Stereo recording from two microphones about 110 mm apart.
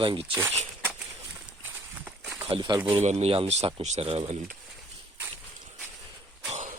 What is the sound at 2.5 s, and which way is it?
Speech, 45° right (ahead or behind).